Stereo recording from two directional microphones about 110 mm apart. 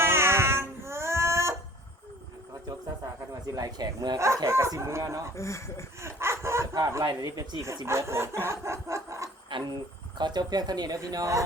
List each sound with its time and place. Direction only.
0.0 s a sound: 20° right (ahead or behind)
2.6 s a sound: 35° right (ahead or behind)
4.2 s speech: 25° right (ahead or behind)
5.4 s speech: 25° left (ahead or behind)
6.0 s dog: 25° right (ahead or behind)
7.0 s speech: 40° right (ahead or behind)
9.5 s speech: 45° right (ahead or behind)